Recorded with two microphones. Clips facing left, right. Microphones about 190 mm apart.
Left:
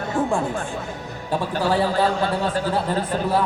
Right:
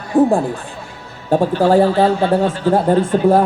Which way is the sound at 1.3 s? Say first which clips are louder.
Right 9 dB; 45° right (ahead or behind).